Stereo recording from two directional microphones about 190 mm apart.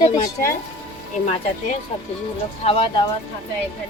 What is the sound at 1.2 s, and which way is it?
A woman's voice, 40° left (ahead or behind).